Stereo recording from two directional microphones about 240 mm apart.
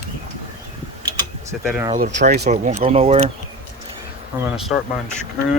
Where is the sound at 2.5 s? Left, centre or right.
Right.